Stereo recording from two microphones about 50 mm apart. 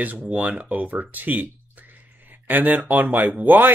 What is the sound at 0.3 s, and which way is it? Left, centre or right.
Speech, right.